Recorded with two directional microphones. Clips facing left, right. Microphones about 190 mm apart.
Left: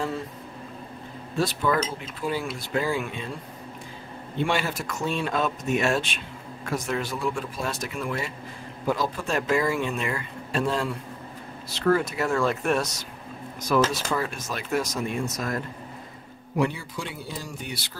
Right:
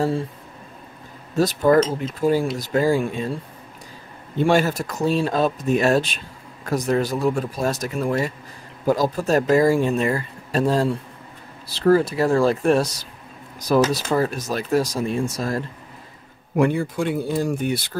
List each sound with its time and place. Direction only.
1.3 s speech: 40° right (ahead or behind)
4.4 s speech: 40° right (ahead or behind)
16.5 s speech: 55° right (ahead or behind)